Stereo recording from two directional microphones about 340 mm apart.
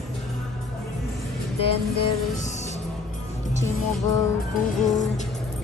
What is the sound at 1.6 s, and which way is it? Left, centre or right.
Music, centre.